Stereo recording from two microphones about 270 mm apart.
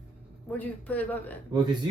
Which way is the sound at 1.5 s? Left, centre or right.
Centre.